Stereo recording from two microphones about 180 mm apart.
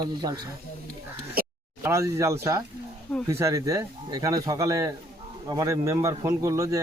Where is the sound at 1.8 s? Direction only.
15° right (ahead or behind).